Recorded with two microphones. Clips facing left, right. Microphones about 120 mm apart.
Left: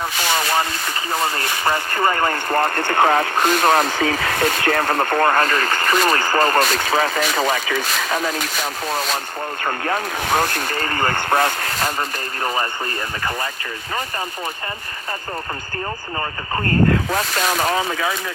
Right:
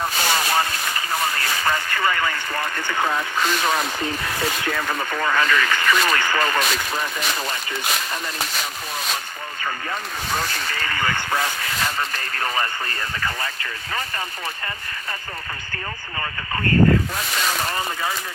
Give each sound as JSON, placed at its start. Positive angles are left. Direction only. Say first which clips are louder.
{"t": 1.2, "sound": "speech", "louder": "left 3 dB", "side_deg": 25}
{"t": 6.7, "sound": "speech", "louder": "left 7 dB", "side_deg": 90}
{"t": 9.6, "sound": "speech", "louder": "left 5 dB", "side_deg": 60}
{"t": 16.9, "sound": "speech", "louder": "left 2 dB", "side_deg": 80}